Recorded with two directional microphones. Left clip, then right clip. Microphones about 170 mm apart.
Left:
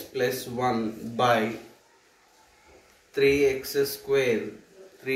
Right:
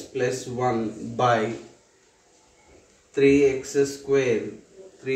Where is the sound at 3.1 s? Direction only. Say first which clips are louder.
Right 3 dB; 15° right (ahead or behind).